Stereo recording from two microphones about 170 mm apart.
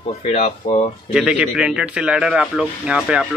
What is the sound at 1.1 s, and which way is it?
Speech, 5° right (ahead or behind).